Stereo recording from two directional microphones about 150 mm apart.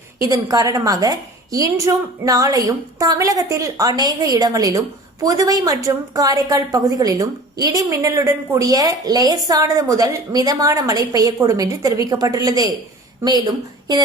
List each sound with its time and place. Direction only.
0.2 s a woman's voice: 25° right (ahead or behind)